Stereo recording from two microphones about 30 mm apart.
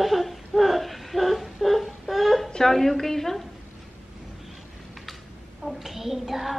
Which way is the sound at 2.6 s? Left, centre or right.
Centre.